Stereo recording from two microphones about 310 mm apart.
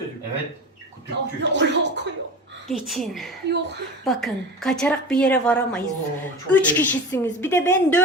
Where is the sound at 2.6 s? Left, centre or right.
Centre.